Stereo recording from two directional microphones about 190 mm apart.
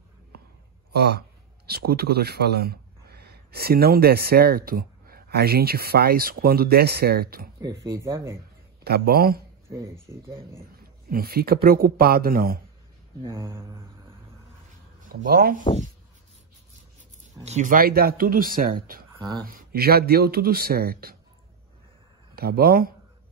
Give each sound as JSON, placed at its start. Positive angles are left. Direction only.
{"t": 0.9, "sound": "speech", "side_deg": -60}
{"t": 7.8, "sound": "speech", "side_deg": -15}
{"t": 8.8, "sound": "speech", "side_deg": -55}
{"t": 9.7, "sound": "speech", "side_deg": -15}
{"t": 11.1, "sound": "speech", "side_deg": -50}
{"t": 13.3, "sound": "speech", "side_deg": -15}
{"t": 15.2, "sound": "speech", "side_deg": -50}
{"t": 17.5, "sound": "speech", "side_deg": -40}
{"t": 19.1, "sound": "speech", "side_deg": -20}
{"t": 19.4, "sound": "speech", "side_deg": -50}
{"t": 22.3, "sound": "speech", "side_deg": -55}